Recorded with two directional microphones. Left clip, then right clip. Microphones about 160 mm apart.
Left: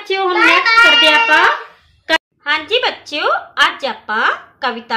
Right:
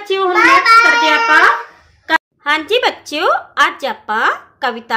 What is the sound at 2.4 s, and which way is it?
A woman's voice, 55° right (ahead or behind).